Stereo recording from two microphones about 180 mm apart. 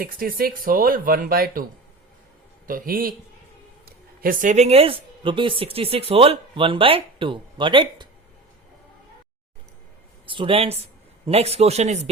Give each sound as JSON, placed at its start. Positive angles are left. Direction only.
{"t": 0.0, "sound": "speech", "side_deg": -55}
{"t": 2.6, "sound": "speech", "side_deg": -50}
{"t": 4.2, "sound": "speech", "side_deg": -50}
{"t": 10.2, "sound": "speech", "side_deg": -30}